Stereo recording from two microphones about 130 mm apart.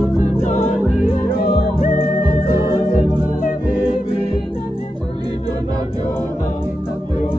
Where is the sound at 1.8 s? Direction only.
90° left.